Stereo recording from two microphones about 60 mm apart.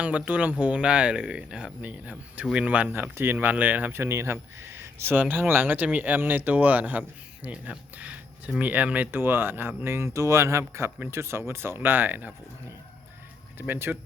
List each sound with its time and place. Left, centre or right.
0.0 s speech: right
2.9 s speech: right
3.3 s speech: right
3.9 s speech: right
13.6 s speech: right